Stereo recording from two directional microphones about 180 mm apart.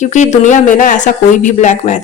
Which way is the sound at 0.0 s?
40° left (ahead or behind).